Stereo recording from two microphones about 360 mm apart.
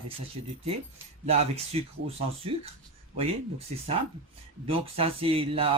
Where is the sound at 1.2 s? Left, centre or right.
Centre.